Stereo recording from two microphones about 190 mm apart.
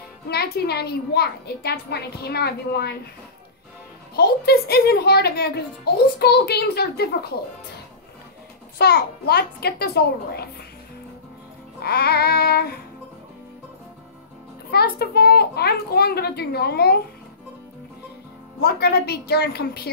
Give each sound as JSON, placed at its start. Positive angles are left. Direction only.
{"t": 0.3, "sound": "a woman's voice", "side_deg": 55}
{"t": 4.2, "sound": "a woman's voice", "side_deg": 55}
{"t": 8.7, "sound": "a woman's voice", "side_deg": 55}
{"t": 11.8, "sound": "a woman's voice", "side_deg": 55}
{"t": 14.7, "sound": "a woman's voice", "side_deg": 55}
{"t": 18.6, "sound": "a woman's voice", "side_deg": 55}